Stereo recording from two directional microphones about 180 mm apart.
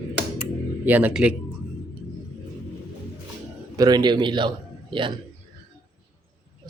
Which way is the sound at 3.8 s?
20° right (ahead or behind).